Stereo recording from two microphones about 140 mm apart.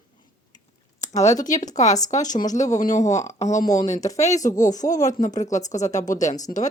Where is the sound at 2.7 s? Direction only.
30° left (ahead or behind).